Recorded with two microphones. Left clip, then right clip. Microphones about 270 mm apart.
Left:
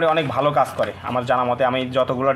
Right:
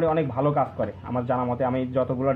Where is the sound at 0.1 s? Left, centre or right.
Centre.